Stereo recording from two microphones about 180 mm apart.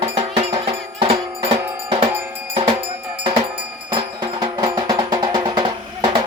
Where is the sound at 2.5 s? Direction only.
30° right (ahead or behind).